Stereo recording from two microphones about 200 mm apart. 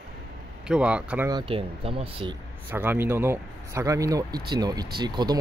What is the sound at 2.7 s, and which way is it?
Speech, 10° right (ahead or behind).